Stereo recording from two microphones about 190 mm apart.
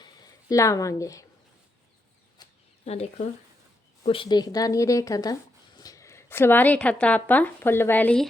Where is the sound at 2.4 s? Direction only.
20° left (ahead or behind).